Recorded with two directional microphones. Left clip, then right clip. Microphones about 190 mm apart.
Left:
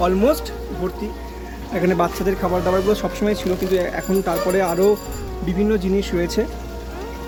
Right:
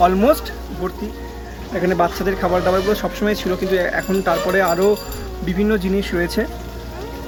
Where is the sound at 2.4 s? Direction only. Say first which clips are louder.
Right 3 dB; 5° left (ahead or behind).